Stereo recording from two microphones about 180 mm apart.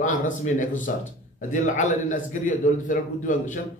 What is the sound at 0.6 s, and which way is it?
A man's voice, 45° left (ahead or behind).